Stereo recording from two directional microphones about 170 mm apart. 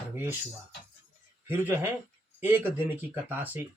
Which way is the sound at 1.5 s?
10° right (ahead or behind).